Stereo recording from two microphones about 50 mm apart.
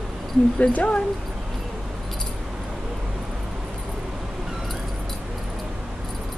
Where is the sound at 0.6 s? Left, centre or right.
Left.